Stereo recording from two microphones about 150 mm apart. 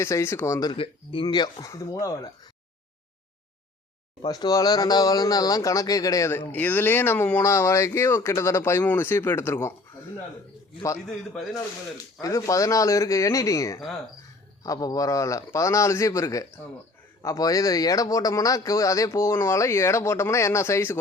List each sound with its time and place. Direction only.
0.0 s a man's voice: 20° left (ahead or behind)
0.8 s a man's voice: 35° left (ahead or behind)
4.2 s a man's voice: 25° left (ahead or behind)
12.2 s a man's voice: 20° left (ahead or behind)